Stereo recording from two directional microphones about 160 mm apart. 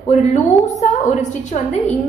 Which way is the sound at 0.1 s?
50° left (ahead or behind).